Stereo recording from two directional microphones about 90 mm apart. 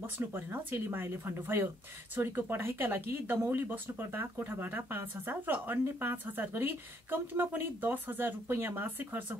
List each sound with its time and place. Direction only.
0.0 s speech: 25° right (ahead or behind)